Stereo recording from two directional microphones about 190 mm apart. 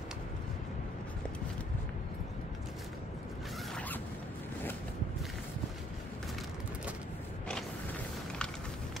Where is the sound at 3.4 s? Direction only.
Centre (ahead or behind).